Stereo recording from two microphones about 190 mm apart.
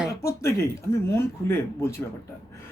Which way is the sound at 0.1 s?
15° left (ahead or behind).